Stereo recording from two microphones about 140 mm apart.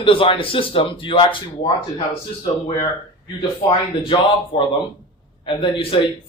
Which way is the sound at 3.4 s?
35° left (ahead or behind).